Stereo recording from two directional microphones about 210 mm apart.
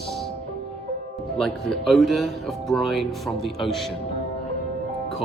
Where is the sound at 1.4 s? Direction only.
Centre (ahead or behind).